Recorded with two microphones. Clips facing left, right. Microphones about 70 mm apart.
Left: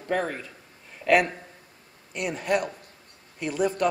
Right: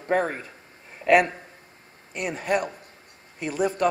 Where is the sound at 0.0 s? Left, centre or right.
Right.